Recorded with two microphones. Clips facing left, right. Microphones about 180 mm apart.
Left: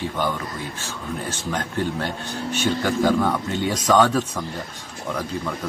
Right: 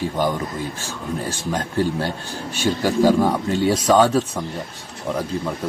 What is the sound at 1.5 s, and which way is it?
Speech, 35° right (ahead or behind).